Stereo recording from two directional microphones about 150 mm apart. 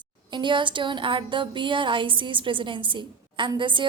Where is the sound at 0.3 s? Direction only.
30° right (ahead or behind).